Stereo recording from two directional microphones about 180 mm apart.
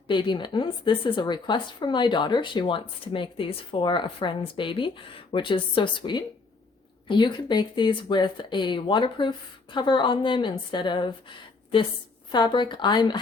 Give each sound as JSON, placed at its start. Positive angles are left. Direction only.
{"t": 0.1, "sound": "a woman's voice", "side_deg": 25}